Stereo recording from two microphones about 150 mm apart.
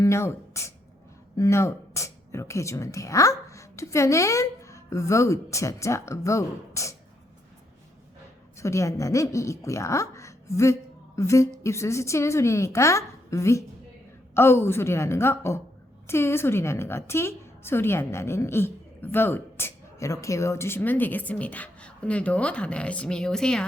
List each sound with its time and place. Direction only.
0.0 s speech: 20° left (ahead or behind)
8.5 s a woman's voice: 20° left (ahead or behind)